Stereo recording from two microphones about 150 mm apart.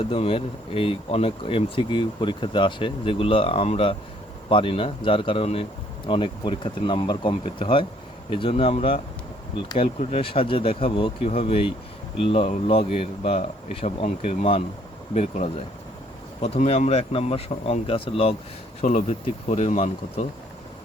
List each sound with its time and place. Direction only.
0.0 s speech: 40° left (ahead or behind)
18.8 s speech: 50° left (ahead or behind)